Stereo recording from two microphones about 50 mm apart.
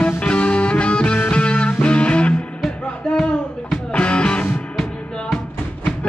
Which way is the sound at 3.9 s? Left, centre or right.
Left.